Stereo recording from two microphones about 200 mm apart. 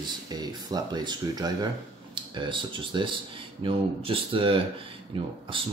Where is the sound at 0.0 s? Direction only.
20° right (ahead or behind).